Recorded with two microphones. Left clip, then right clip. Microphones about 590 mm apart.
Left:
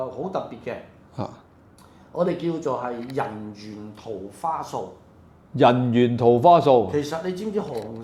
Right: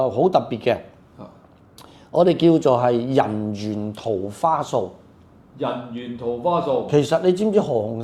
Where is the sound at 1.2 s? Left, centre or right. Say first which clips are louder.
Left 9 dB; left.